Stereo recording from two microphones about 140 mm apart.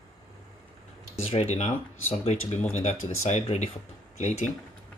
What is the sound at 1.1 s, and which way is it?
Speech, 45° left (ahead or behind).